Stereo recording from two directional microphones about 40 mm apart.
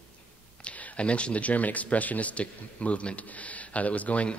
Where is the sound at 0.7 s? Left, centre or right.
Left.